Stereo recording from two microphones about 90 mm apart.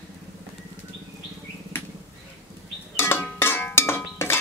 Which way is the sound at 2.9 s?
25° left (ahead or behind).